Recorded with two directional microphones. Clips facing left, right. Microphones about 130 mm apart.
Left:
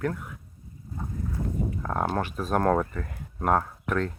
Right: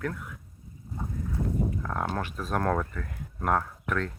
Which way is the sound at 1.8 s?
25° left (ahead or behind).